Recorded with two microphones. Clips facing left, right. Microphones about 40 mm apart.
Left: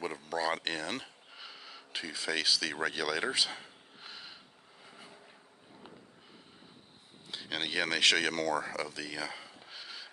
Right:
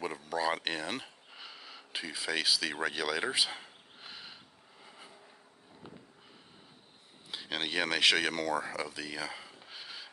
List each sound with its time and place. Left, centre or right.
0.0 s a sound: centre
4.8 s vehicle: centre
7.2 s speech: centre